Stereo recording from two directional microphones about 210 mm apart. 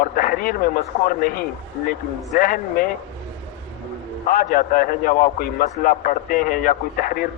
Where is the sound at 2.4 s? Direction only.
40° left (ahead or behind).